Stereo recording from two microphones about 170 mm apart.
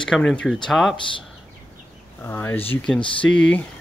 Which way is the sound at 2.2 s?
15° left (ahead or behind).